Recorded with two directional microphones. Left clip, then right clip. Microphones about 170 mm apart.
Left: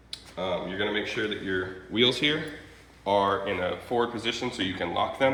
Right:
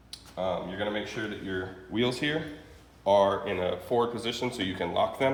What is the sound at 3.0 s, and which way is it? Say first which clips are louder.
Speech: right 1 dB; 45° right (ahead or behind).